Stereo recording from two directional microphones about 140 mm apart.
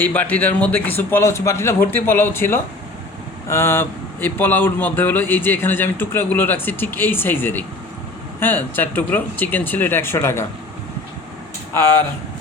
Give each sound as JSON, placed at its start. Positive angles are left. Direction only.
{"t": 0.0, "sound": "a man's voice", "side_deg": 10}